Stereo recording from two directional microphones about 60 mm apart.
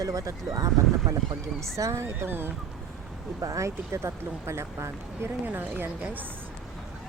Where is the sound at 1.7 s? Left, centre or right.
Right.